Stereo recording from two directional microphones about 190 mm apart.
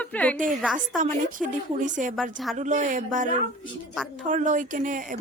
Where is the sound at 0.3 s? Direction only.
45° right (ahead or behind).